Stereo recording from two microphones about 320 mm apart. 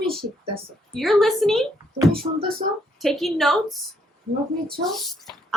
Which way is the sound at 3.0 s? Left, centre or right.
Centre.